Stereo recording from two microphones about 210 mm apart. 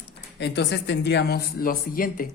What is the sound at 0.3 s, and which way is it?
A man's voice, 55° left (ahead or behind).